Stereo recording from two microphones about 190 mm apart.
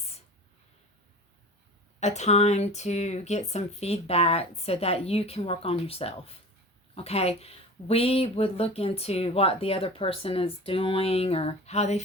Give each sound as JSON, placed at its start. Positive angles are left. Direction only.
{"t": 2.0, "sound": "speech", "side_deg": 35}